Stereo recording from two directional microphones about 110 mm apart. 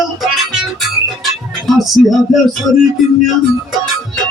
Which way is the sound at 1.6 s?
Centre (ahead or behind).